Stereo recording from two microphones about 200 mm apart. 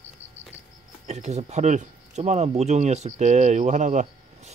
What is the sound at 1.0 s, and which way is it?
Speech, 35° right (ahead or behind).